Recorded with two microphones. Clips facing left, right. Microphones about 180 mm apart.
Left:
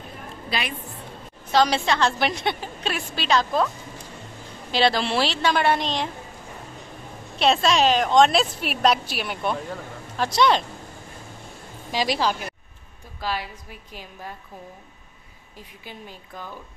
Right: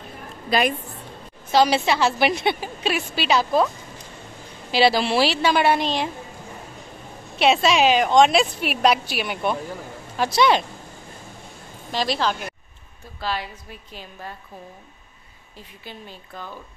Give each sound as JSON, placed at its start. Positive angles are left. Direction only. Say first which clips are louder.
{"t": 0.5, "sound": "a woman's voice", "louder": "right 9 dB", "side_deg": -45}
{"t": 1.5, "sound": "a woman's voice", "louder": "right 2 dB", "side_deg": -10}
{"t": 4.7, "sound": "a woman's voice", "louder": "right 3 dB", "side_deg": -5}
{"t": 7.3, "sound": "a woman's voice", "louder": "right 2 dB", "side_deg": -5}
{"t": 11.9, "sound": "a woman's voice", "louder": "even", "side_deg": 10}
{"t": 15.8, "sound": "a woman's voice", "louder": "right 1 dB", "side_deg": 10}